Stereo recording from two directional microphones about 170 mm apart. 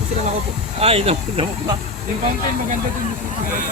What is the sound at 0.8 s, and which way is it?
Speech, 35° right (ahead or behind).